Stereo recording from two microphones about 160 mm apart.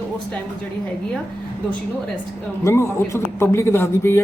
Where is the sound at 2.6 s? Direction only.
15° left (ahead or behind).